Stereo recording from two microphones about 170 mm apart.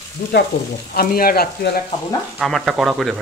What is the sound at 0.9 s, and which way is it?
Speech, 60° left (ahead or behind).